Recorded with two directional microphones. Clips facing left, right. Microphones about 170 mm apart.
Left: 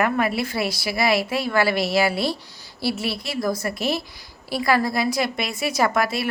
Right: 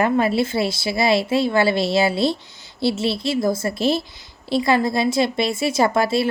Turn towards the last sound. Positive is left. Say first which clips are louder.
# right 4 dB
turn(degrees=-30)  # may be behind; listen again after turning